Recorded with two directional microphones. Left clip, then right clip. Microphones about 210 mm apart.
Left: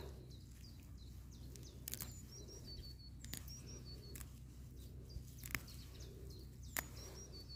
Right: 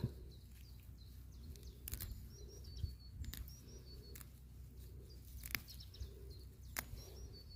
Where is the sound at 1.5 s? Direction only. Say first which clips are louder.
Left 3 dB; 5° left (ahead or behind).